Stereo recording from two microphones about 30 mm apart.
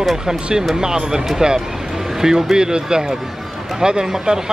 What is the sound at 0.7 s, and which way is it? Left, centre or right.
Speech, right.